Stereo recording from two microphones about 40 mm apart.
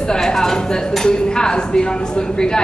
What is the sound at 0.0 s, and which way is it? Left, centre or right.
A woman's voice, centre.